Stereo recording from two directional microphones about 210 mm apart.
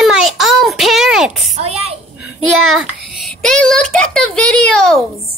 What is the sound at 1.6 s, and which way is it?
Speech, 30° right (ahead or behind).